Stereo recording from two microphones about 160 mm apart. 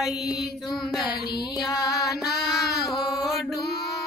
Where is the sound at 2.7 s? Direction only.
Centre (ahead or behind).